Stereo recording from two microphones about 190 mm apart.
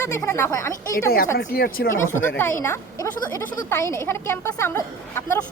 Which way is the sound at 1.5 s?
50° left (ahead or behind).